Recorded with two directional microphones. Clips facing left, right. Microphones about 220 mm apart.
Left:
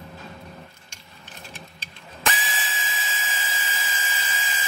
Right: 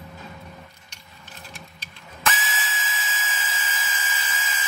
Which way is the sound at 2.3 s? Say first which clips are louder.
Right 1 dB; 30° left (ahead or behind).